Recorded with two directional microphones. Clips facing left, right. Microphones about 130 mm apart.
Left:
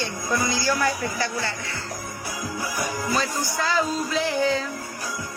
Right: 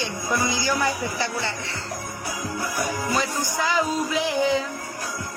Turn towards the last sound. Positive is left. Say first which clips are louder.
# right 1 dB
turn(degrees=-15)  # may be behind; listen again after turning